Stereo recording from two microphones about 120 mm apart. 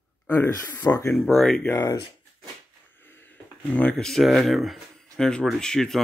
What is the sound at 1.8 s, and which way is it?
Speech, 35° left (ahead or behind).